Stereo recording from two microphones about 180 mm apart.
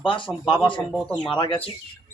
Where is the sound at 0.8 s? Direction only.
Centre (ahead or behind).